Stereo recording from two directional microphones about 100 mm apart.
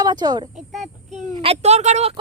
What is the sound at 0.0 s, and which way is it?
Speech, 40° right (ahead or behind).